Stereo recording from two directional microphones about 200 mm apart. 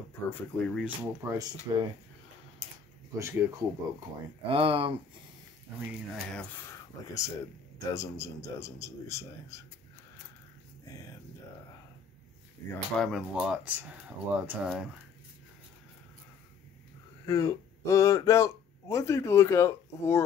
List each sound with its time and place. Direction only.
0.3 s a man's voice: 5° left (ahead or behind)
0.8 s speech: 10° right (ahead or behind)
3.2 s speech: 15° right (ahead or behind)
4.5 s speech: 25° right (ahead or behind)
6.1 s a man's voice: 10° left (ahead or behind)
12.9 s speech: centre (ahead or behind)
17.3 s speech: 15° left (ahead or behind)